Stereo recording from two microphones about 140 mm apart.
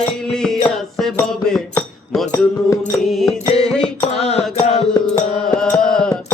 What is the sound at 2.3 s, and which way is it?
Music, 20° left (ahead or behind).